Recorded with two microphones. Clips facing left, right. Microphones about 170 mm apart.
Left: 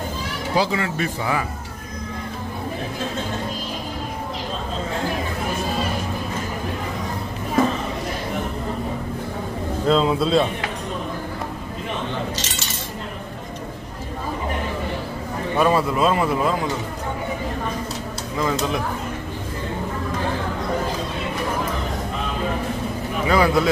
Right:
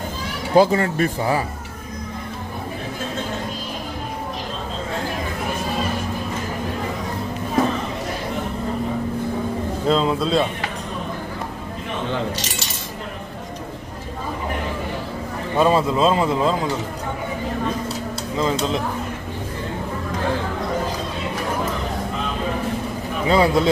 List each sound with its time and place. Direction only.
0.6 s speech: 45° right (ahead or behind)
9.8 s speech: centre (ahead or behind)
15.5 s a man's voice: 25° right (ahead or behind)
18.4 s a man's voice: 20° right (ahead or behind)
23.2 s a man's voice: 25° right (ahead or behind)